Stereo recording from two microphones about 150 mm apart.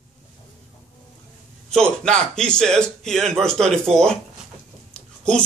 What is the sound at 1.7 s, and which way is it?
Speech, 5° left (ahead or behind).